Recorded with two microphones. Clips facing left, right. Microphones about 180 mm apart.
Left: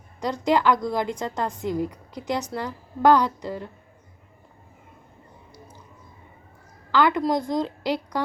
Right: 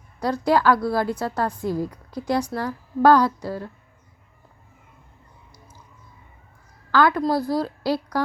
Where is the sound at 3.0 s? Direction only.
15° left (ahead or behind).